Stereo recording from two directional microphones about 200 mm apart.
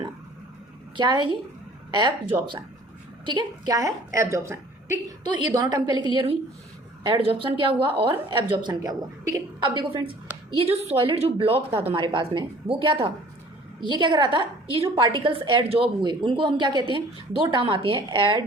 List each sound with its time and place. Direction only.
0.9 s a woman's voice: 25° right (ahead or behind)